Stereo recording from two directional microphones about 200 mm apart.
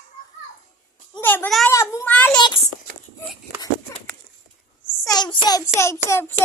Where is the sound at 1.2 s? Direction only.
10° left (ahead or behind).